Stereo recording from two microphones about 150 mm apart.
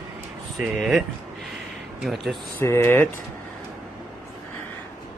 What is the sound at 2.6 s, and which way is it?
Speech, 20° left (ahead or behind).